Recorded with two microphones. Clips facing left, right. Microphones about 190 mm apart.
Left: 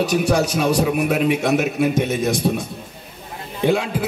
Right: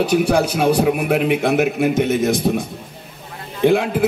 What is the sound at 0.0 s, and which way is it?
A man's voice, 55° right (ahead or behind).